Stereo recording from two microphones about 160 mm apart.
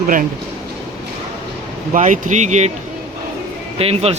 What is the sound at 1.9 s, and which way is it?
Speech, 50° right (ahead or behind).